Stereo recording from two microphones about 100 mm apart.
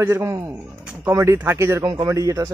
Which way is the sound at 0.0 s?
30° right (ahead or behind).